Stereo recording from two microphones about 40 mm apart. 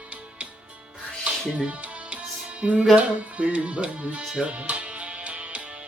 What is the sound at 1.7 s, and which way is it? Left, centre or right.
Music, right.